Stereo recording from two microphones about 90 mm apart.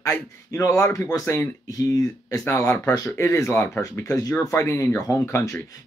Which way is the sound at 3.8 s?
35° left (ahead or behind).